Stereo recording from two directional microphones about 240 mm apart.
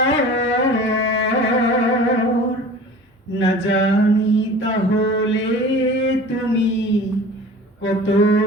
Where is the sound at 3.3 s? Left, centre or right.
Left.